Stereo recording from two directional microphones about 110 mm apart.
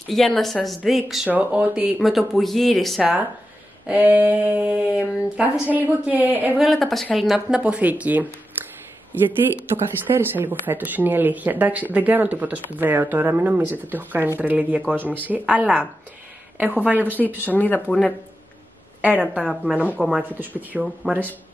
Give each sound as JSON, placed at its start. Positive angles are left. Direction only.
{"t": 0.1, "sound": "speech", "side_deg": 0}
{"t": 1.3, "sound": "speech", "side_deg": -15}
{"t": 2.0, "sound": "speech", "side_deg": 0}
{"t": 3.0, "sound": "speech", "side_deg": -10}
{"t": 6.6, "sound": "speech", "side_deg": 0}
{"t": 9.9, "sound": "speech", "side_deg": -20}
{"t": 17.4, "sound": "speech", "side_deg": 15}
{"t": 18.9, "sound": "a woman's voice", "side_deg": -15}
{"t": 21.0, "sound": "speech", "side_deg": 5}